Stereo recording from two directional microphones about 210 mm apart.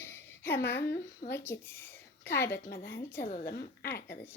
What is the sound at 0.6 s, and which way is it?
Speech, 50° left (ahead or behind).